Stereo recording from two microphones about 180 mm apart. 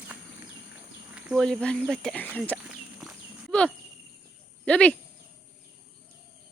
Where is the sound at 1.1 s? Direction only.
5° right (ahead or behind).